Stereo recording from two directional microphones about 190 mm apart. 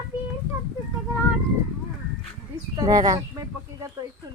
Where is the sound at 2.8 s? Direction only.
20° right (ahead or behind).